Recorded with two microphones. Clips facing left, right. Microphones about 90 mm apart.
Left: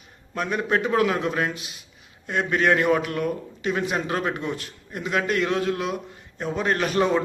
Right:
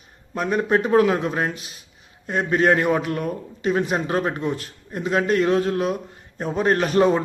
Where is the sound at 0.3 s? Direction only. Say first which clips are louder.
Right 4 dB; 35° right (ahead or behind).